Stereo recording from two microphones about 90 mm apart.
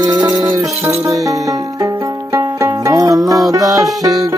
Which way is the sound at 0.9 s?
35° right (ahead or behind).